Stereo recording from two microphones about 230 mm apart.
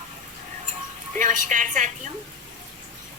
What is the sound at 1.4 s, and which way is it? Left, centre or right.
Speech, right.